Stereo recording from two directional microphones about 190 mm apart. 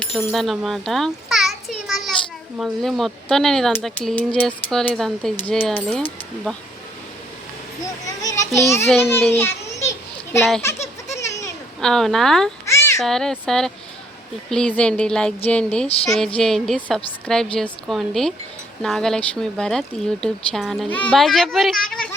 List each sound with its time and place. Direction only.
0.0 s a sound: 5° left (ahead or behind)
2.6 s speech: centre (ahead or behind)
8.0 s a child's voice: 15° left (ahead or behind)
9.3 s children playing: 10° left (ahead or behind)
11.2 s sheep: 15° left (ahead or behind)
11.8 s speech: 5° left (ahead or behind)
12.6 s a sound: 15° left (ahead or behind)
13.0 s a child's voice: centre (ahead or behind)